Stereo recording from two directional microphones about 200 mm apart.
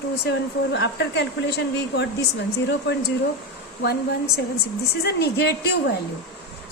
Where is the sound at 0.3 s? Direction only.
55° left (ahead or behind).